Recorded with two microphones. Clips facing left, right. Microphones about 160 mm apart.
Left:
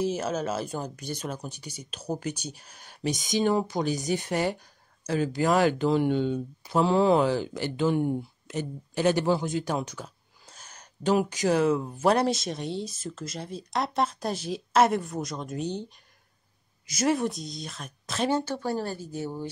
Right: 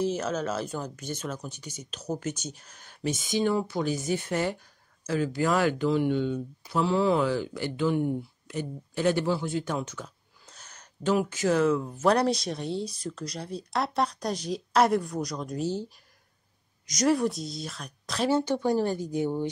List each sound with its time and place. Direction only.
0.0 s speech: 10° left (ahead or behind)
10.0 s speech: 35° left (ahead or behind)
10.4 s a sound: 10° left (ahead or behind)
10.8 s speech: 15° left (ahead or behind); by 15.7 s centre (ahead or behind)
16.8 s speech: 5° left (ahead or behind)
18.3 s speech: 15° right (ahead or behind)